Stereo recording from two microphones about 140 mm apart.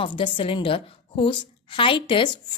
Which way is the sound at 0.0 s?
40° left (ahead or behind).